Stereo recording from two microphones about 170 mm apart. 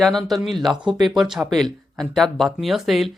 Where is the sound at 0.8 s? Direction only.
25° right (ahead or behind).